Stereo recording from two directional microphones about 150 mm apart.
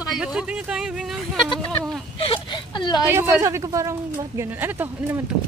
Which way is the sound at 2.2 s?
35° left (ahead or behind).